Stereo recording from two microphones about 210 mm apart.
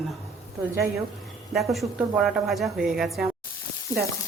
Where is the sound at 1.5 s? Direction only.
Centre (ahead or behind).